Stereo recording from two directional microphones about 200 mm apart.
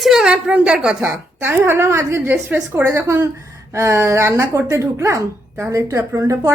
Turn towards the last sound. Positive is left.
turn(degrees=-15)  # may be behind; listen again after turning